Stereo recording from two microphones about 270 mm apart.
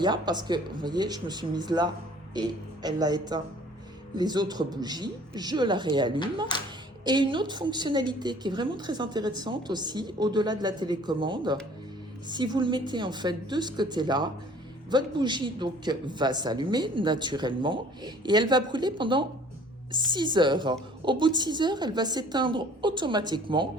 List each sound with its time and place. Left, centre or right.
0.0 s a woman's voice: centre